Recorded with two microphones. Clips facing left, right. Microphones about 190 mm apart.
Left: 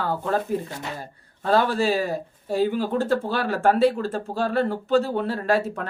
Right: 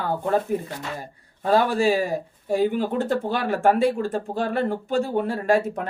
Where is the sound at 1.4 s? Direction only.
15° right (ahead or behind).